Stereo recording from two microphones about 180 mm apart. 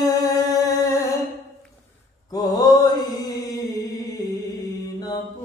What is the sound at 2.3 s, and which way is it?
Mantra, 20° left (ahead or behind).